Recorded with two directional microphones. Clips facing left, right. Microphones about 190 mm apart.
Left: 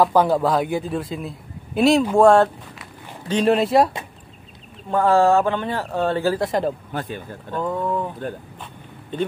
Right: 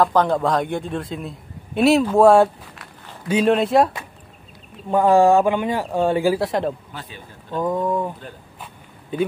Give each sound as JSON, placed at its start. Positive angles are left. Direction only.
{"t": 0.0, "sound": "a man's voice", "side_deg": 10}
{"t": 4.9, "sound": "speech", "side_deg": -15}
{"t": 6.4, "sound": "a man's voice", "side_deg": 0}
{"t": 6.9, "sound": "speech", "side_deg": 50}
{"t": 7.5, "sound": "speech", "side_deg": -15}